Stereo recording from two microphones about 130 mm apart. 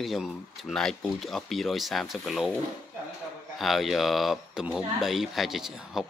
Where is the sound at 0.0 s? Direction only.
Centre (ahead or behind).